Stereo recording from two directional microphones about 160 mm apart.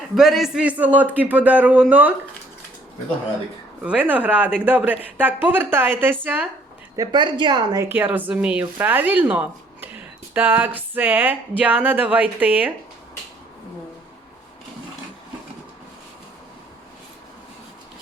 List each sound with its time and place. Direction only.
0.2 s speech: centre (ahead or behind)
3.8 s speech: 10° right (ahead or behind)
6.9 s a woman's voice: 25° right (ahead or behind)
7.9 s speech: 10° right (ahead or behind)